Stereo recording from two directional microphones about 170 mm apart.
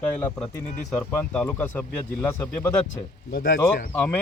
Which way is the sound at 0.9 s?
10° left (ahead or behind).